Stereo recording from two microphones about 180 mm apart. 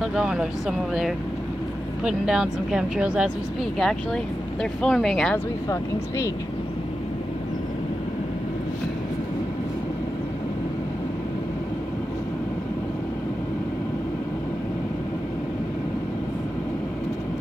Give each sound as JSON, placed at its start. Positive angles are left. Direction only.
{"t": 0.0, "sound": "speech", "side_deg": -5}
{"t": 5.7, "sound": "speech", "side_deg": 15}